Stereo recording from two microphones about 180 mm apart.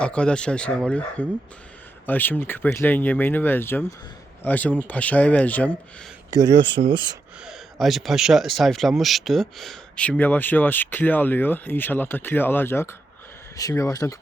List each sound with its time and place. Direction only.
0.0 s speech: 5° left (ahead or behind)
6.3 s speech: 25° right (ahead or behind)
6.8 s speech: 40° right (ahead or behind)
7.4 s speech: centre (ahead or behind); by 14.2 s 20° left (ahead or behind)